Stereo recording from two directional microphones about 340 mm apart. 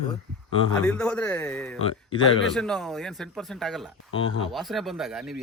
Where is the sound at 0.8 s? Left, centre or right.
Centre.